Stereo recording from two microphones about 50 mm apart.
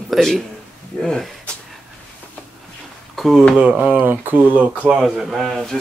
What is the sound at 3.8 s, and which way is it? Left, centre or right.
Speech, right.